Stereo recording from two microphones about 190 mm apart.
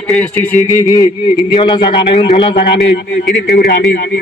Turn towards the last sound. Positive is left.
turn(degrees=55)  # may be behind; listen again after turning